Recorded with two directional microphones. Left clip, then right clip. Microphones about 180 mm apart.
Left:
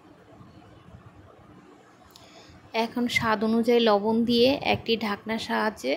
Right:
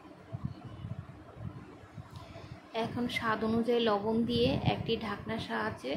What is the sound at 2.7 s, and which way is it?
A woman's voice, 45° left (ahead or behind).